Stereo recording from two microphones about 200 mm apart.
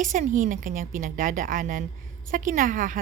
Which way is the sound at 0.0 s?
40° right (ahead or behind).